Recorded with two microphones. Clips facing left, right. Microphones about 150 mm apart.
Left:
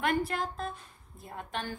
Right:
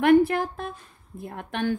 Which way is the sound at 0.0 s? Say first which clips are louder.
Right 12 dB; 60° right (ahead or behind).